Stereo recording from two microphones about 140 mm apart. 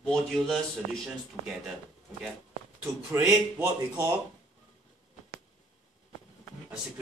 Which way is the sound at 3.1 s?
20° right (ahead or behind).